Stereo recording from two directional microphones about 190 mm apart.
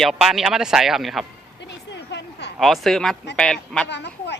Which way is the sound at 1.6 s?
65° left (ahead or behind).